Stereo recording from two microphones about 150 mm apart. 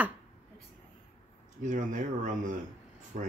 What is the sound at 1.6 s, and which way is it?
Speech, 60° right (ahead or behind).